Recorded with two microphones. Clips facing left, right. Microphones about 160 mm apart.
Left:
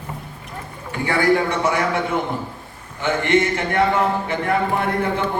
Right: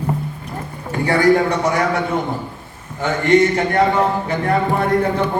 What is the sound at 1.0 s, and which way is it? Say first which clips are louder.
Speech: right 4 dB; 40° right (ahead or behind).